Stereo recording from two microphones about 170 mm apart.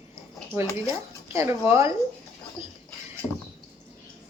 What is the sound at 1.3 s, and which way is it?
Speech, 15° right (ahead or behind).